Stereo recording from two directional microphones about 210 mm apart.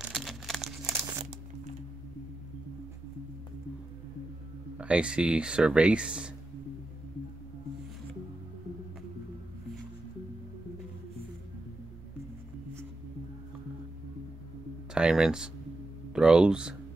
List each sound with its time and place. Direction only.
0.0 s crumpling: centre (ahead or behind)
0.8 s crumpling: 15° right (ahead or behind)
4.7 s speech: 5° right (ahead or behind)
15.0 s speech: 5° right (ahead or behind)